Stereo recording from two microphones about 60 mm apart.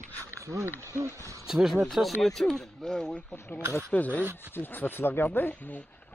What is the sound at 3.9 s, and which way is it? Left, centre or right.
Speech, left.